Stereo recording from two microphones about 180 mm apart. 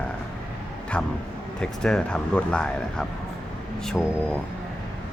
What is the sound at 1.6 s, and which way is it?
Speech, 5° left (ahead or behind).